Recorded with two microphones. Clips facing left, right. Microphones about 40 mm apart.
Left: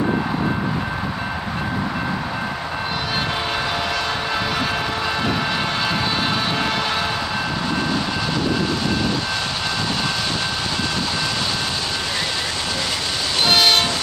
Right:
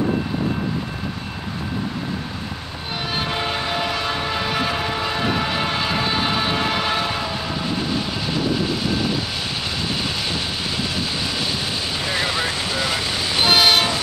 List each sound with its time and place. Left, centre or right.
3.3 s train: centre
13.4 s train: centre